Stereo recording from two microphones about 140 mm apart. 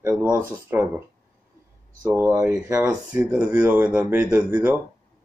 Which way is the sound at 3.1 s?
25° right (ahead or behind).